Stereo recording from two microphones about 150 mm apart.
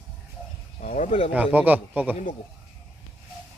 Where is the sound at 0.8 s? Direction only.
55° left (ahead or behind).